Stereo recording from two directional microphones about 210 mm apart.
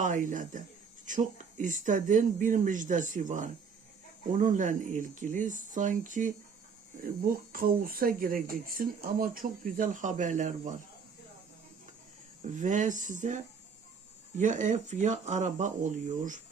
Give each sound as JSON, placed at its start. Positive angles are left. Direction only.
{"t": 0.0, "sound": "speech", "side_deg": -40}
{"t": 12.4, "sound": "speech", "side_deg": -35}